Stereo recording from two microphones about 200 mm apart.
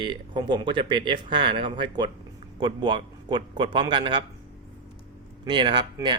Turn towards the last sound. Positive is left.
turn(degrees=-20)  # may be behind; listen again after turning